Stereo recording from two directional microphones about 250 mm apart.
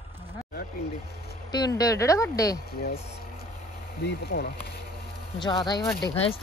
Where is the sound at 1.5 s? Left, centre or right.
Centre.